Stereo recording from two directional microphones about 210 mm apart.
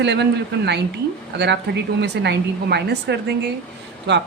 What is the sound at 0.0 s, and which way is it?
A woman's voice, 55° right (ahead or behind).